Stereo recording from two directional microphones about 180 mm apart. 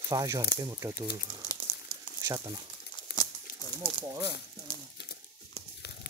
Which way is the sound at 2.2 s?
20° right (ahead or behind).